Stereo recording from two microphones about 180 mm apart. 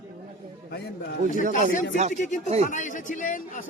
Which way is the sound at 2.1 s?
40° left (ahead or behind).